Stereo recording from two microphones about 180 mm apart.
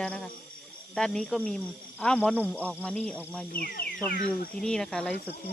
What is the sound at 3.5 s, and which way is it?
Speech, 55° left (ahead or behind).